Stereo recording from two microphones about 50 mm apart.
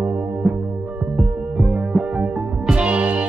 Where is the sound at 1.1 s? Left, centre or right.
Centre.